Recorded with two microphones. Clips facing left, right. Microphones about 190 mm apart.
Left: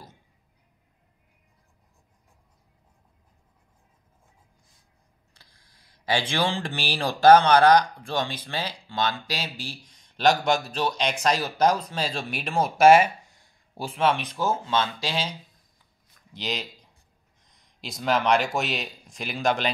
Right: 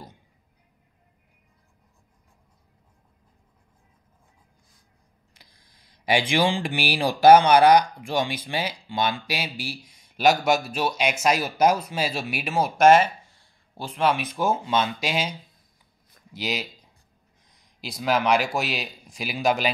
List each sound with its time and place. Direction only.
5.3 s speech: 15° right (ahead or behind)
16.3 s speech: 5° right (ahead or behind)